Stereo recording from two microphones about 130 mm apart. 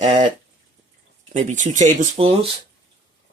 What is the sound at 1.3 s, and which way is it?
Speech, 70° right (ahead or behind).